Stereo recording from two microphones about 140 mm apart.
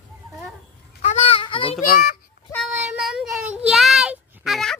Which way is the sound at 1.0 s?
50° left (ahead or behind).